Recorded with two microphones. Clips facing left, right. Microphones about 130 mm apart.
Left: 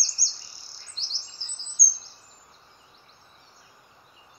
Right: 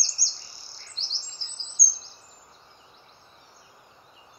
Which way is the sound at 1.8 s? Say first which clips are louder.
Even; 20° right (ahead or behind).